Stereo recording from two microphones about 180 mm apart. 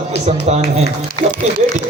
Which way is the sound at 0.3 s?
35° right (ahead or behind).